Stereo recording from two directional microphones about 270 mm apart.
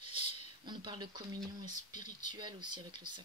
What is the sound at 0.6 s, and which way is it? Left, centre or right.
Speech, centre.